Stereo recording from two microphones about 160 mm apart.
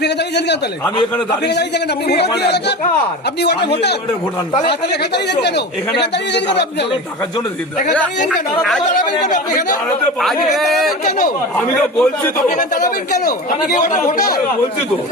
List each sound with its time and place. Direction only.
0.0 s a man's voice: 90° left
9.2 s speech: 50° left (ahead or behind)
10.2 s a man's voice: centre (ahead or behind)
12.5 s speech: 55° left (ahead or behind)